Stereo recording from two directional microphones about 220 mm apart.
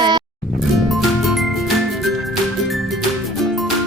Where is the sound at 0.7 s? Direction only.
Centre (ahead or behind).